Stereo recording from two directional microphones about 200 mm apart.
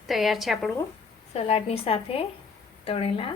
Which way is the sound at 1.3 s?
30° left (ahead or behind).